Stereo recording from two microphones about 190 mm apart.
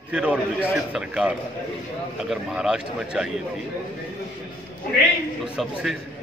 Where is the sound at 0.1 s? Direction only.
5° right (ahead or behind).